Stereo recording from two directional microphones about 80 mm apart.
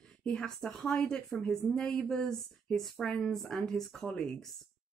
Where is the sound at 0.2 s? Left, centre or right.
Centre.